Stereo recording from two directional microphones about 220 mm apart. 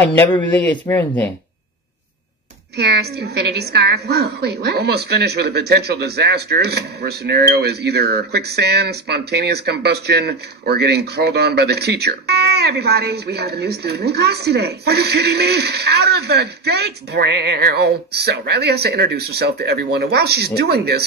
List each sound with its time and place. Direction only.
0.4 s speech: 5° left (ahead or behind)
2.8 s a woman's voice: 45° right (ahead or behind)